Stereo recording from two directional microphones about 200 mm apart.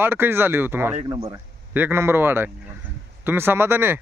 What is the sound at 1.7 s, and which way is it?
Speech, 10° right (ahead or behind).